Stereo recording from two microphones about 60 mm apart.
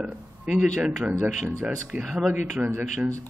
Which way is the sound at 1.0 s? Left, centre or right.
Right.